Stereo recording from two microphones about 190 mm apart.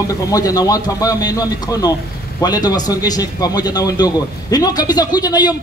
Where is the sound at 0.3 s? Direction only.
20° left (ahead or behind).